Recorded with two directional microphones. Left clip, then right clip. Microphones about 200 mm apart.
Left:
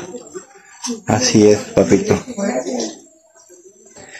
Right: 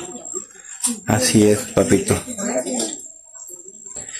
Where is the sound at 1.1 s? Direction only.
5° right (ahead or behind).